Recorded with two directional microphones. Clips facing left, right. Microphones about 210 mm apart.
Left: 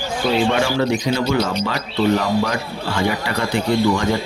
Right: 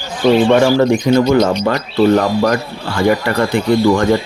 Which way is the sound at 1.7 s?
50° right (ahead or behind).